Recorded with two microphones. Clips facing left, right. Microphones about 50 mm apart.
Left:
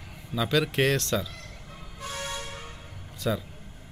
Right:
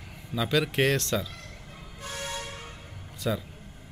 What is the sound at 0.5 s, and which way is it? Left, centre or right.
Speech, right.